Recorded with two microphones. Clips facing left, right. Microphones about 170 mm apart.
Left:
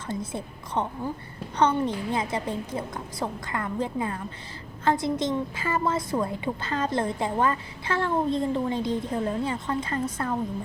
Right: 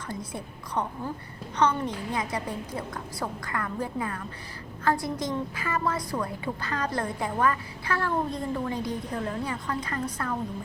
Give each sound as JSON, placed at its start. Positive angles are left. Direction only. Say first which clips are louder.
{"t": 0.1, "sound": "a woman's voice", "louder": "left 5 dB", "side_deg": 25}